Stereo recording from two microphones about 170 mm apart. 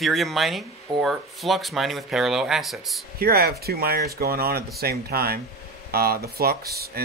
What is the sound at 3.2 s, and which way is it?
Speech, 65° right (ahead or behind).